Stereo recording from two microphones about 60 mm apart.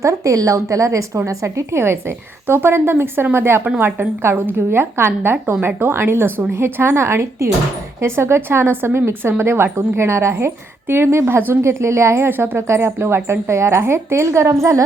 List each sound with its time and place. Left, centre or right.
0.0 s a woman's voice: right